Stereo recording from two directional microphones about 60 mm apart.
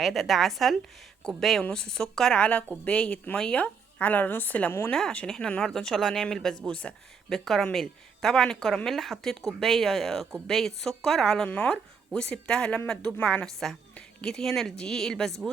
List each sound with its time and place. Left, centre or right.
0.0 s speech: centre; by 3.3 s left
3.3 s speech: centre
3.6 s a woman's voice: left
4.9 s speech: centre
7.3 s speech: centre